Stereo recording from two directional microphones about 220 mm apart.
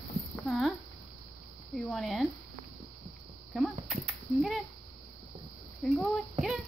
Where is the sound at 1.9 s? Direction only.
Centre (ahead or behind).